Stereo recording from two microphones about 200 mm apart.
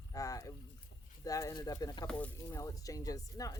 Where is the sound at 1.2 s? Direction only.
15° left (ahead or behind).